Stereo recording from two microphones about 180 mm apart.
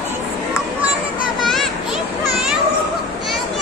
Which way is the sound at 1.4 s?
Centre (ahead or behind).